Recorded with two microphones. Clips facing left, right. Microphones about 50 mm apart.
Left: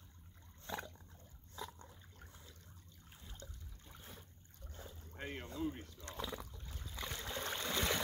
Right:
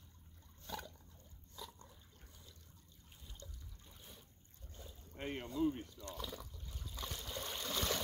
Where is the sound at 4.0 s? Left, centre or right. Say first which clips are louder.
Left 4 dB; left.